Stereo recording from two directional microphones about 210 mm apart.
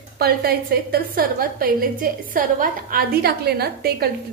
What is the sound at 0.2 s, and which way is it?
A woman's voice, 45° right (ahead or behind).